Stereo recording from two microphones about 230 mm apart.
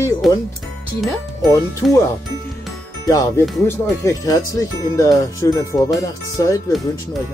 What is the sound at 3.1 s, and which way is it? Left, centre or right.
Speech, centre.